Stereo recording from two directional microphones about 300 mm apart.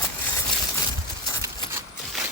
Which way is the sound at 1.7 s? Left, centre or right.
Centre.